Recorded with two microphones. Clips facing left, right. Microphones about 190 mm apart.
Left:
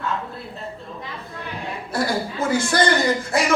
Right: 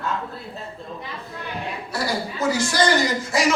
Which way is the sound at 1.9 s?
55° left (ahead or behind).